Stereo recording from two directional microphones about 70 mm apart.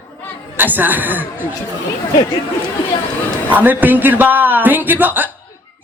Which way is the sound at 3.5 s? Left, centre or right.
Right.